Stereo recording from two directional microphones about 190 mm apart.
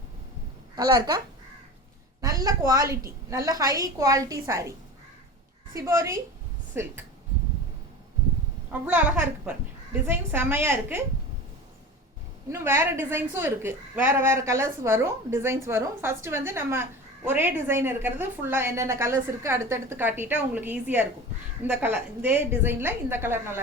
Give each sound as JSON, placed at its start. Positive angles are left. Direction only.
{"t": 0.8, "sound": "a woman's voice", "side_deg": -20}
{"t": 2.2, "sound": "a woman's voice", "side_deg": -20}
{"t": 5.7, "sound": "a woman's voice", "side_deg": -15}
{"t": 8.9, "sound": "a woman's voice", "side_deg": -10}
{"t": 12.5, "sound": "a woman's voice", "side_deg": -15}